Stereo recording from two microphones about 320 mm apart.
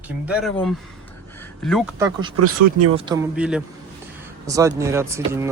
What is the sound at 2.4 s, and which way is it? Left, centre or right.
Speech, right.